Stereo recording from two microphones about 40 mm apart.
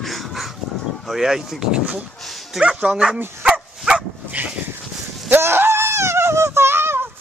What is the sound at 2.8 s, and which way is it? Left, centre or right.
Speech, centre.